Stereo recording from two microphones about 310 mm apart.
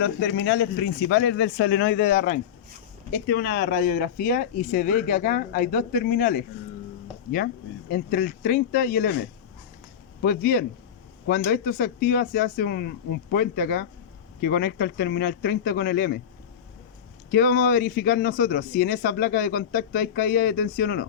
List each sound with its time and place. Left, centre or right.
0.0 s speech: left
10.2 s speech: left
17.3 s speech: left